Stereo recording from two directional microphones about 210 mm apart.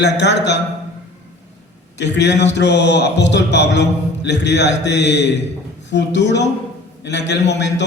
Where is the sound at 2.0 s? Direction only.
55° left (ahead or behind).